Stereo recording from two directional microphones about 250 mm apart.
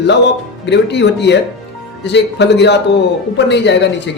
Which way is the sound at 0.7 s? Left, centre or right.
Left.